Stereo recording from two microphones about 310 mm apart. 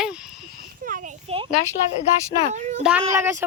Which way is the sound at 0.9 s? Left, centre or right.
Right.